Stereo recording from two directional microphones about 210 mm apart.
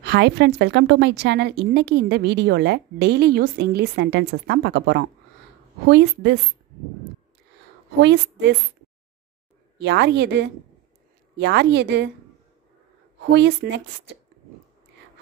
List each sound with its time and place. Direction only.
0.0 s a woman's voice: 55° right (ahead or behind)
8.0 s a woman's voice: 55° right (ahead or behind)
9.8 s a woman's voice: 55° right (ahead or behind)
13.3 s a woman's voice: 50° right (ahead or behind)